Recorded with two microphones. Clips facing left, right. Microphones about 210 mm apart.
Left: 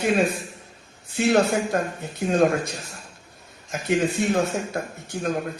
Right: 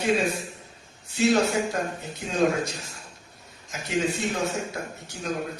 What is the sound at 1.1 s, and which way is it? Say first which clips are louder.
A man's voice: left 2 dB; 55° left (ahead or behind).